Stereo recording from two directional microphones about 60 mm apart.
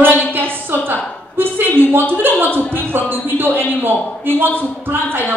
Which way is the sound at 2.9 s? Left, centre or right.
Right.